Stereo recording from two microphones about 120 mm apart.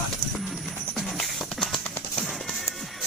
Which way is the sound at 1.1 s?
Centre (ahead or behind).